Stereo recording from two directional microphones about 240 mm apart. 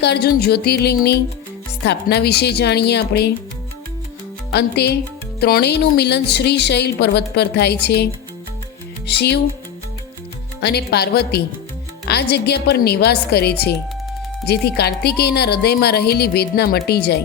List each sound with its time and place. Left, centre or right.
0.0 s a woman's voice: left
4.5 s a woman's voice: left
9.0 s a woman's voice: left
10.6 s a woman's voice: left